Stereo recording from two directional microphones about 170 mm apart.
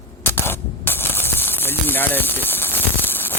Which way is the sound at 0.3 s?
10° left (ahead or behind).